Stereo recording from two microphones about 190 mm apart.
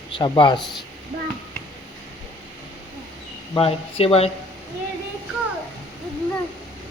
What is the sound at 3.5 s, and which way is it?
Speech, 30° left (ahead or behind).